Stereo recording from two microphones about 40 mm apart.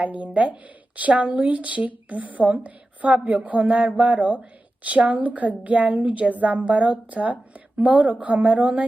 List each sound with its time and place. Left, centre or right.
0.0 s a woman's voice: right